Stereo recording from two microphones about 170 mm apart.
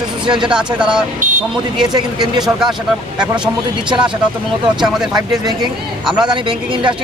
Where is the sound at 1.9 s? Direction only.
25° right (ahead or behind).